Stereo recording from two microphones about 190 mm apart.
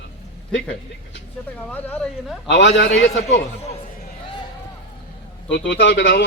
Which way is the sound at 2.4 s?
70° left (ahead or behind).